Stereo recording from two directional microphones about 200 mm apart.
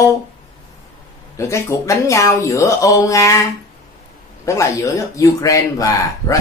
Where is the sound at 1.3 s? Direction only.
15° left (ahead or behind).